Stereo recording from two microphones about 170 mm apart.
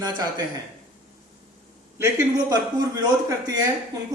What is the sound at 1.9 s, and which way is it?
Speech, 20° right (ahead or behind).